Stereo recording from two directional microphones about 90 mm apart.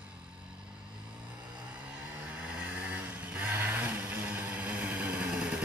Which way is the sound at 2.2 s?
10° right (ahead or behind).